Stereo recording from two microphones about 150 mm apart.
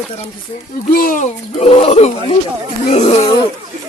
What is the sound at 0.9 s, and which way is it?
Speech, 70° left (ahead or behind).